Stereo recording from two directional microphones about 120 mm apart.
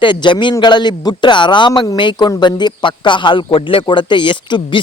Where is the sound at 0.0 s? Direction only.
40° left (ahead or behind).